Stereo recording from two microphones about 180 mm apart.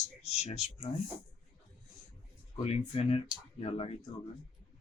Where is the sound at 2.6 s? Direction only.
35° left (ahead or behind).